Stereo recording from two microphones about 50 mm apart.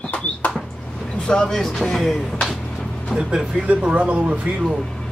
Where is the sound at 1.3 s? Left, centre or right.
Centre.